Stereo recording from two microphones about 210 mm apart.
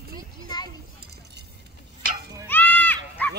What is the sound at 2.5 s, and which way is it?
Goat, 10° left (ahead or behind).